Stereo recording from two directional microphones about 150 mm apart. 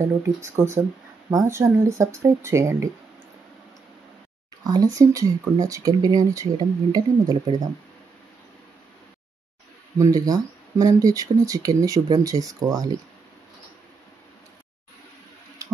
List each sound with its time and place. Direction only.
0.0 s speech: 20° right (ahead or behind)
4.6 s speech: 25° right (ahead or behind)
9.9 s speech: 20° right (ahead or behind)